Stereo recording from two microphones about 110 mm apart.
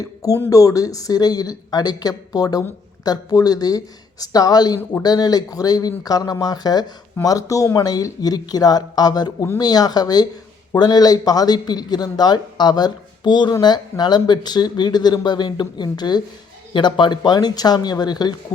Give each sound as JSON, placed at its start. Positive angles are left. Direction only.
{"t": 0.0, "sound": "a man's voice", "side_deg": 35}